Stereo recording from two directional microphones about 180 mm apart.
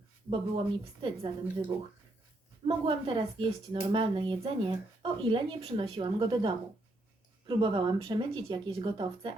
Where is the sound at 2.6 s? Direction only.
30° right (ahead or behind).